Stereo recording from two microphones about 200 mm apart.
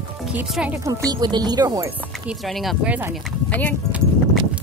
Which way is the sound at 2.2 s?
Centre (ahead or behind).